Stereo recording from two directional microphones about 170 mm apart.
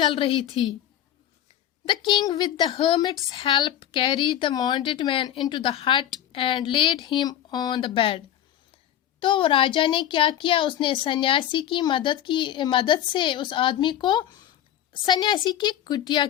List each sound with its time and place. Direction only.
0.0 s a woman's voice: 30° left (ahead or behind)
1.9 s a woman's voice: 25° left (ahead or behind)
9.2 s a woman's voice: 30° left (ahead or behind)